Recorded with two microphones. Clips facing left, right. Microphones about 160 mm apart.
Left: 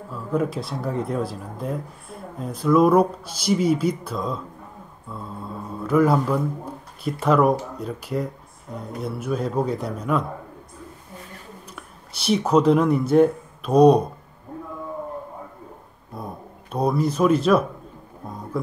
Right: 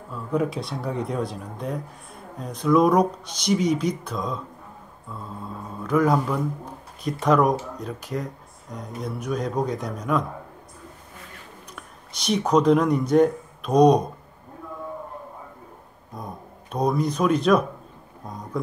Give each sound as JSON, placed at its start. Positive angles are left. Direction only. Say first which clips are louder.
{"t": 0.1, "sound": "speech", "louder": "left 1 dB", "side_deg": 0}
{"t": 5.9, "sound": "speech", "louder": "left 2 dB", "side_deg": 5}
{"t": 11.7, "sound": "speech", "louder": "left 1 dB", "side_deg": 5}
{"t": 16.1, "sound": "speech", "louder": "left 2 dB", "side_deg": 5}